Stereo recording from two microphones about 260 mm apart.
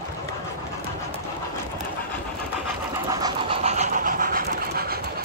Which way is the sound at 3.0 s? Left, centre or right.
Centre.